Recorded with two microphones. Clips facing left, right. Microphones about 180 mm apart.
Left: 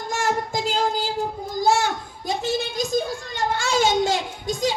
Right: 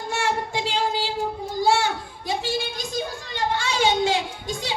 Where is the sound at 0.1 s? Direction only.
40° left (ahead or behind).